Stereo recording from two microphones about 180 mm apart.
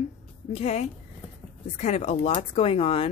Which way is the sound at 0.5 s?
35° left (ahead or behind).